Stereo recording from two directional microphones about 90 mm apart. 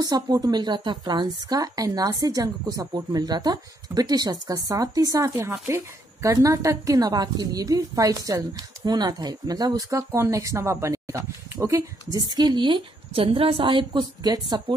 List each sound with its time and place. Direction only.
0.0 s a woman's voice: 45° right (ahead or behind)
12.2 s a woman's voice: 50° right (ahead or behind); by 14.0 s 65° right (ahead or behind)
14.2 s a woman's voice: 45° right (ahead or behind)